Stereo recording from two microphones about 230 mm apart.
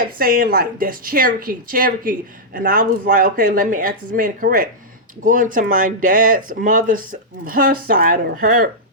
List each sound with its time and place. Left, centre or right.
0.2 s a woman's voice: right